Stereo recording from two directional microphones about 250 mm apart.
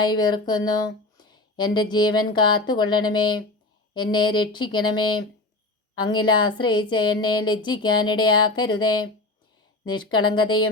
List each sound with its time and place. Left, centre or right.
0.0 s speech: centre